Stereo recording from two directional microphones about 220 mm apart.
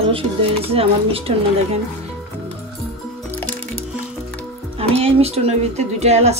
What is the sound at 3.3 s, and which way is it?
Music, 10° left (ahead or behind).